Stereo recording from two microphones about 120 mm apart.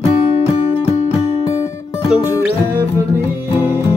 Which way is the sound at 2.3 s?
20° right (ahead or behind).